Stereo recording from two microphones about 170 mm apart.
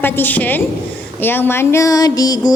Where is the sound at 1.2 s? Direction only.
10° left (ahead or behind).